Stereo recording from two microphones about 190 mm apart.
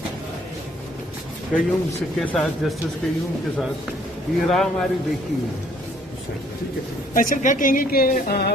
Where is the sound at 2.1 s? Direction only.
5° left (ahead or behind).